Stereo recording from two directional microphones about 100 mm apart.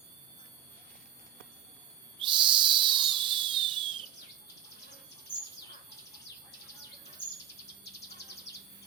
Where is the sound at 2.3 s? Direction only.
55° right (ahead or behind).